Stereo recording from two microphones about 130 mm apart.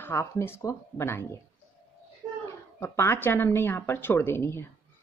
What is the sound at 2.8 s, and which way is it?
Speech, 20° left (ahead or behind).